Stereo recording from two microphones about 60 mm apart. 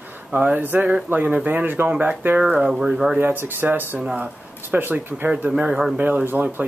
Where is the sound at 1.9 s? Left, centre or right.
Right.